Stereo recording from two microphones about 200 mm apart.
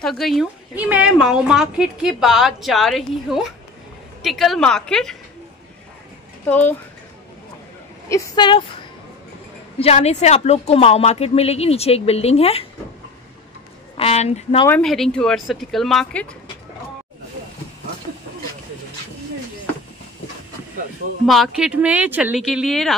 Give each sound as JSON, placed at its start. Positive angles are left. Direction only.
{"t": 0.0, "sound": "a woman's voice", "side_deg": 0}
{"t": 8.1, "sound": "a woman's voice", "side_deg": 25}
{"t": 9.8, "sound": "a woman's voice", "side_deg": 30}
{"t": 13.9, "sound": "a woman's voice", "side_deg": 30}
{"t": 14.7, "sound": "a woman's voice", "side_deg": 0}
{"t": 21.3, "sound": "a woman's voice", "side_deg": 0}